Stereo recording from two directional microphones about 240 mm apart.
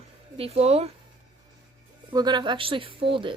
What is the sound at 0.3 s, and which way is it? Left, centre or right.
Speech, right.